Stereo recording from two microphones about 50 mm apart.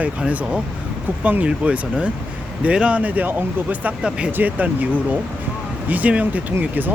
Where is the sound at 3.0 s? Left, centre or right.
Right.